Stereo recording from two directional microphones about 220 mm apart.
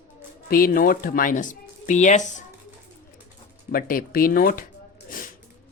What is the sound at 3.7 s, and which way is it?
Speech, 40° left (ahead or behind).